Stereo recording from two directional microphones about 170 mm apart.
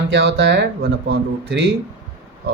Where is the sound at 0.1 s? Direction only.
90° right.